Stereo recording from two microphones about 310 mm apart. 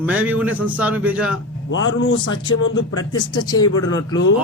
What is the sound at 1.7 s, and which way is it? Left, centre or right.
A man's voice, left.